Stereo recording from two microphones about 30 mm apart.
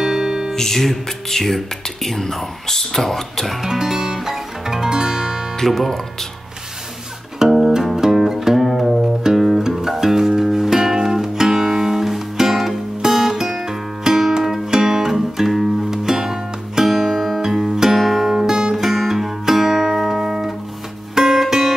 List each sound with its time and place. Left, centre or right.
0.0 s music: centre
0.6 s speech: centre
3.6 s music: centre
5.7 s speech: centre
7.3 s music: centre
17.9 s music: centre
18.3 s music: centre